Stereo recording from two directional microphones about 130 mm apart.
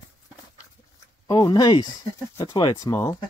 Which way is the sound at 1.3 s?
35° left (ahead or behind).